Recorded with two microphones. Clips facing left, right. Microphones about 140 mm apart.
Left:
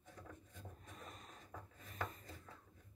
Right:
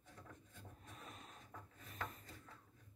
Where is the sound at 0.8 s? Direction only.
Centre (ahead or behind).